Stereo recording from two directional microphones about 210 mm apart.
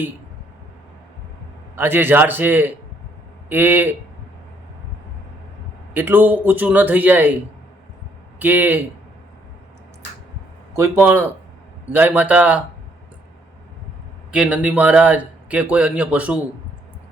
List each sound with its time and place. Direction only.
1.7 s speech: 10° right (ahead or behind)
5.9 s speech: 10° right (ahead or behind)
8.4 s speech: 10° right (ahead or behind)
10.8 s speech: 10° right (ahead or behind)
14.3 s speech: 5° right (ahead or behind)